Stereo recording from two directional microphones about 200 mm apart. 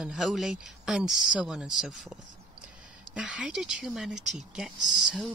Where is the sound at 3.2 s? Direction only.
5° right (ahead or behind).